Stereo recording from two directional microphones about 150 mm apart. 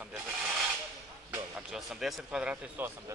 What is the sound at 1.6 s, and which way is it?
Speech, centre (ahead or behind).